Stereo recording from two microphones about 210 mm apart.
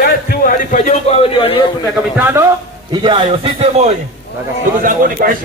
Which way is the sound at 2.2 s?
10° right (ahead or behind).